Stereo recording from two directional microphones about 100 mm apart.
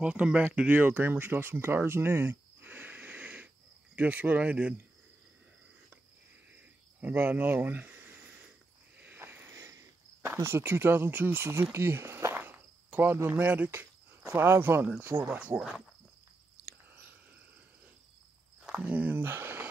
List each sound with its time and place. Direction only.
0.0 s speech: 10° right (ahead or behind)
6.5 s cricket: 15° right (ahead or behind)
9.0 s a sound: 20° right (ahead or behind)
10.2 s speech: 25° right (ahead or behind)
12.4 s cricket: 20° right (ahead or behind)
18.7 s speech: 15° right (ahead or behind)